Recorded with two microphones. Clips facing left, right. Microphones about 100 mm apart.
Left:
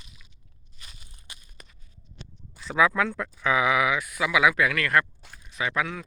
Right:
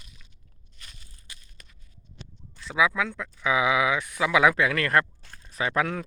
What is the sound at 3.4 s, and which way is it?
Speech, 20° right (ahead or behind).